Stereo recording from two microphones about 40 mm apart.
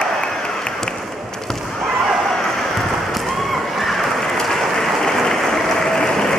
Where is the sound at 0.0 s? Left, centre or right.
Centre.